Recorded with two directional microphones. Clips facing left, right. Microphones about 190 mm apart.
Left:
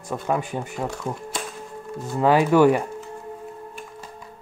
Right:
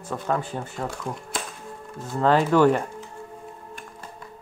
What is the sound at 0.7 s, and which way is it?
Speech, centre (ahead or behind).